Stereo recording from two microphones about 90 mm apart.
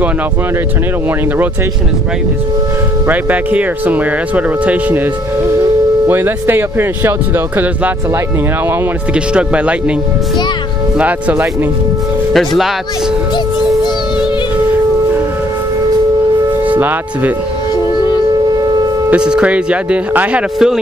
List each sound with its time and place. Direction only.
3.1 s speech: 20° right (ahead or behind)
6.0 s speech: 25° right (ahead or behind)
9.1 s speech: 10° right (ahead or behind)
11.0 s speech: 15° right (ahead or behind)
12.3 s speech: centre (ahead or behind)
16.6 s speech: 20° right (ahead or behind)
19.0 s speech: 10° right (ahead or behind)